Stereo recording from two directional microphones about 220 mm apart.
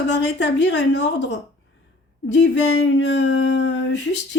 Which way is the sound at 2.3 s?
55° left (ahead or behind).